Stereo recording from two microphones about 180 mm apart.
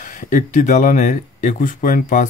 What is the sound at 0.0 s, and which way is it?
Speech, 45° left (ahead or behind).